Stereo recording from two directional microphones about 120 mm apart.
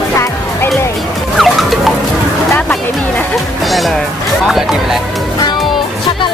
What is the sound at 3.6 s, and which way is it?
Music, centre (ahead or behind).